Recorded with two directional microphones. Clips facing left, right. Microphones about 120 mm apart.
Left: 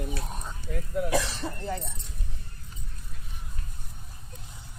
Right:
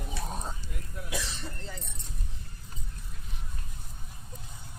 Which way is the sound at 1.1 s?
75° left (ahead or behind).